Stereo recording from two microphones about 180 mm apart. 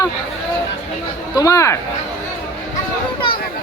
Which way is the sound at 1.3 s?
20° left (ahead or behind).